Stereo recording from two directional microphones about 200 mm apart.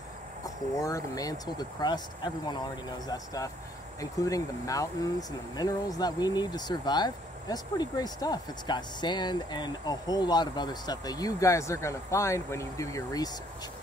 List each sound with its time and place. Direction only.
0.7 s speech: 15° left (ahead or behind)
4.0 s speech: 15° left (ahead or behind)